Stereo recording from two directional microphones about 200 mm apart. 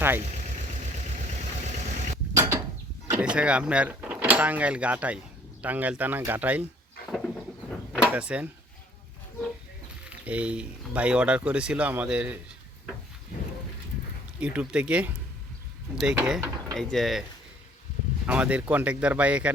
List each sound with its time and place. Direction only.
0.7 s vehicle: 35° right (ahead or behind)
2.3 s a sound: 15° right (ahead or behind)
3.1 s speech: 5° right (ahead or behind)
7.1 s a sound: centre (ahead or behind)
8.0 s speech: 5° right (ahead or behind)
10.1 s speech: 5° right (ahead or behind)
14.4 s speech: 5° right (ahead or behind)
18.3 s speech: 5° right (ahead or behind)